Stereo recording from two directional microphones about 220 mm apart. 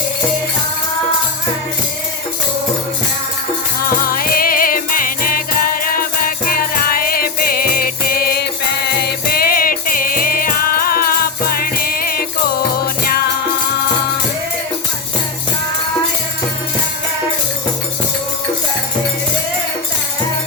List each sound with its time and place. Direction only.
3.8 s music: 40° left (ahead or behind)